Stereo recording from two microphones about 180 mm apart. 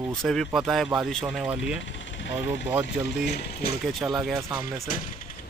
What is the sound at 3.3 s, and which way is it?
Speech, 65° left (ahead or behind).